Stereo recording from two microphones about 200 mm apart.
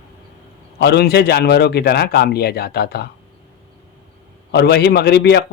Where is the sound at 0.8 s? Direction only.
55° left (ahead or behind).